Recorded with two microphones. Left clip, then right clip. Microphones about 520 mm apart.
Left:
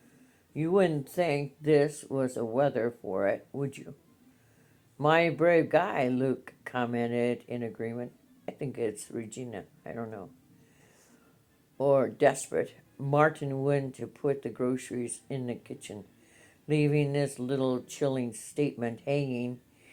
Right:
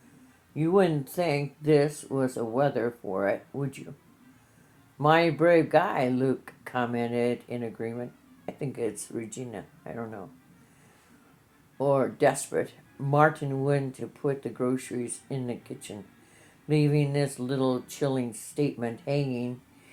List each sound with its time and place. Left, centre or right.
0.5 s speech: left
4.9 s speech: left
11.8 s speech: left